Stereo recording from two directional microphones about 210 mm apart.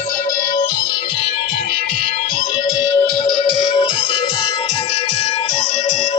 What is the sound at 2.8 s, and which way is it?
Music, 25° left (ahead or behind).